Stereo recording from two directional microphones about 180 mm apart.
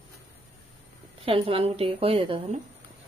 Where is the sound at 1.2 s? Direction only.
30° right (ahead or behind).